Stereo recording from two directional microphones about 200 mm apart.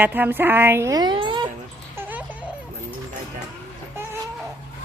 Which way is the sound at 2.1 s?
5° right (ahead or behind).